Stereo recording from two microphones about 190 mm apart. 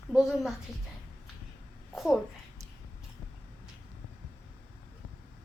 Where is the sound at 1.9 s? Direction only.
Centre (ahead or behind).